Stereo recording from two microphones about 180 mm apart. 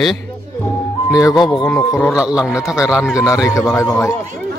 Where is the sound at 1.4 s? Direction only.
25° left (ahead or behind).